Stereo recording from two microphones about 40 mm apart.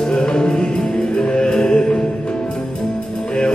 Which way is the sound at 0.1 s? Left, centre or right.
Left.